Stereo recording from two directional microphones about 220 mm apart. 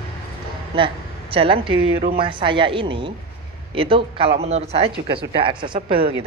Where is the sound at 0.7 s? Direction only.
25° right (ahead or behind).